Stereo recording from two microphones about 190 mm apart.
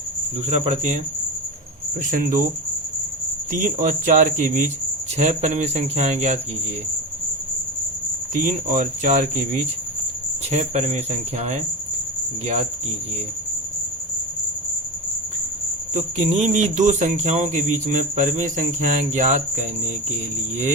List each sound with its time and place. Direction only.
0.4 s speech: 35° right (ahead or behind)
2.0 s speech: 45° right (ahead or behind)
3.5 s speech: 40° right (ahead or behind)
8.3 s speech: 45° right (ahead or behind)
16.0 s speech: 40° right (ahead or behind)